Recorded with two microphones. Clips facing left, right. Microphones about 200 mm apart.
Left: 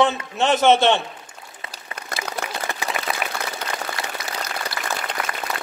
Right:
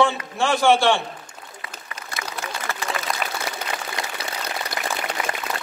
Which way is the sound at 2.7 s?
15° left (ahead or behind).